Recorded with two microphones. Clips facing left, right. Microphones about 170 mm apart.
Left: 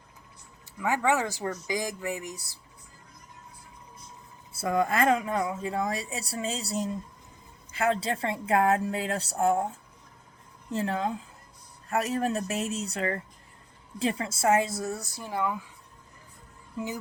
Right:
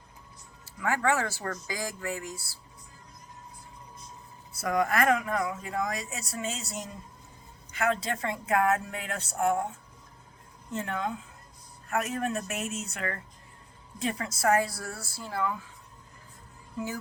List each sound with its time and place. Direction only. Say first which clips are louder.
0.6 s speech: left 1 dB; 20° left (ahead or behind)
4.5 s a woman's voice: left 1 dB; 30° left (ahead or behind)